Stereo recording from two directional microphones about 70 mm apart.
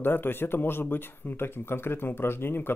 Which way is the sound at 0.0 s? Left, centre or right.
Left.